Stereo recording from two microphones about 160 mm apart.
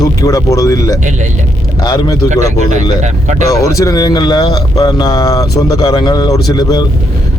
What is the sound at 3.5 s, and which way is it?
Speech, 20° left (ahead or behind).